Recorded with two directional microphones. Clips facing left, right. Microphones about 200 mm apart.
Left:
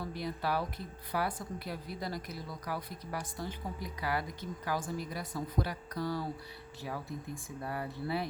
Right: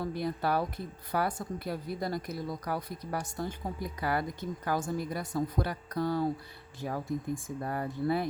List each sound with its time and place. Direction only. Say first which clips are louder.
0.0 s a woman's voice: right 5 dB; 50° right (ahead or behind)